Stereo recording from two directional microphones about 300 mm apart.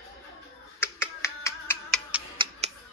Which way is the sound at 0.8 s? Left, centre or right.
Centre.